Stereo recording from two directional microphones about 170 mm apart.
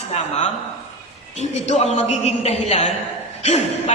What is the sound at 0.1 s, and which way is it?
A man's voice, 40° left (ahead or behind).